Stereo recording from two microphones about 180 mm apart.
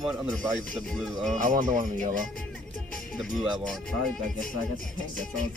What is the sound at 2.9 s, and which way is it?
Speech, centre (ahead or behind).